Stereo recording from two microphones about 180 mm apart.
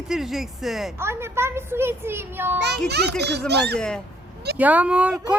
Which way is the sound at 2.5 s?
65° right (ahead or behind).